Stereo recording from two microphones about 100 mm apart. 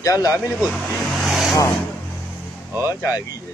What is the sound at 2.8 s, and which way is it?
Speech, 35° left (ahead or behind).